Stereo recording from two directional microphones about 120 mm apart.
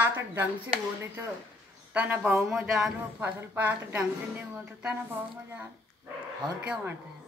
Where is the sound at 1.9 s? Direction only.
15° right (ahead or behind).